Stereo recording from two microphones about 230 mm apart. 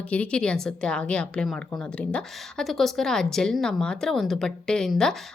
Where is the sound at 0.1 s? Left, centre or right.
Centre.